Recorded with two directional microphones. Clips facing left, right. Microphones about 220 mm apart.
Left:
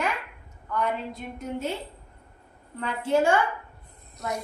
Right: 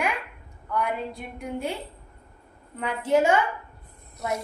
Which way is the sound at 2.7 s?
15° right (ahead or behind).